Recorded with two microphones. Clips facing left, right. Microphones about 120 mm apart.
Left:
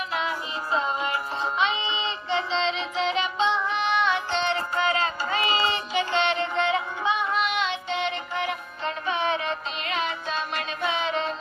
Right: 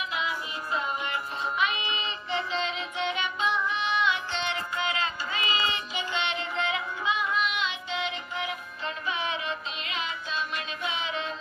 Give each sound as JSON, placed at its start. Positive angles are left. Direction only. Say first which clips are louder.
{"t": 0.1, "sound": "music", "louder": "left 4 dB", "side_deg": 40}
{"t": 5.9, "sound": "music", "louder": "left 8 dB", "side_deg": 80}
{"t": 6.1, "sound": "music", "louder": "left 5 dB", "side_deg": 35}
{"t": 7.4, "sound": "music", "louder": "left 4 dB", "side_deg": 65}
{"t": 8.8, "sound": "music", "louder": "left 6 dB", "side_deg": 30}
{"t": 9.9, "sound": "music", "louder": "left 6 dB", "side_deg": 50}
{"t": 11.0, "sound": "child singing", "louder": "left 6 dB", "side_deg": 35}